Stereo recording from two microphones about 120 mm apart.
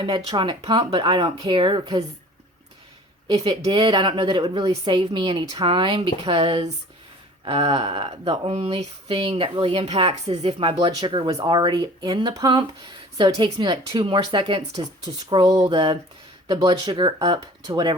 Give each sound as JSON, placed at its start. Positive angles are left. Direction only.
{"t": 0.3, "sound": "speech", "side_deg": -40}
{"t": 3.7, "sound": "speech", "side_deg": -40}
{"t": 11.3, "sound": "speech", "side_deg": -35}